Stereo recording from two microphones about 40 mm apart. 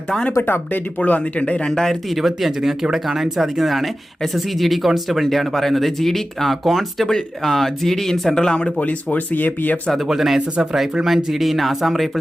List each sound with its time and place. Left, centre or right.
0.4 s speech: left
0.9 s speech: left
1.2 s speech: left
1.6 s speech: centre
2.0 s speech: centre; by 9.2 s left
9.3 s speech: left
10.1 s speech: centre
10.3 s speech: centre